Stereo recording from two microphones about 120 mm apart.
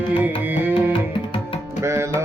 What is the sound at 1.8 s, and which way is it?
Tabla, 25° right (ahead or behind).